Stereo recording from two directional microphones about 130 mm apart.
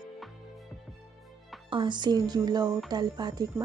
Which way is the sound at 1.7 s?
35° right (ahead or behind).